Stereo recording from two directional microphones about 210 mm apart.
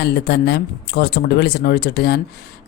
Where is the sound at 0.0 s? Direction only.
50° left (ahead or behind).